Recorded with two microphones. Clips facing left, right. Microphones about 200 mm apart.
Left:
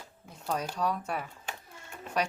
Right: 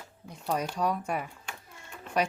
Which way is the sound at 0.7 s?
10° right (ahead or behind).